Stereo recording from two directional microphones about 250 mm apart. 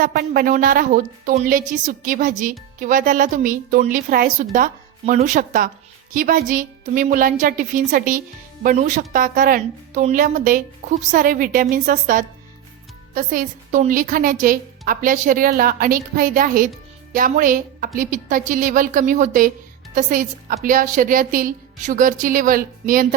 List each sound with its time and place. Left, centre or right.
0.0 s a woman's voice: right